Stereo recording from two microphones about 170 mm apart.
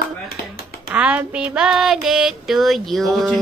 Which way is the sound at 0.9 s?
10° right (ahead or behind).